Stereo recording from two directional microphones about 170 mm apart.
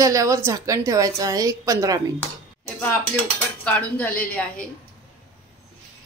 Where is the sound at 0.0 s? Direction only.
20° right (ahead or behind).